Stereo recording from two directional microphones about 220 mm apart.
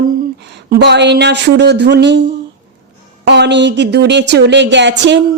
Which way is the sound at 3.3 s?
50° right (ahead or behind).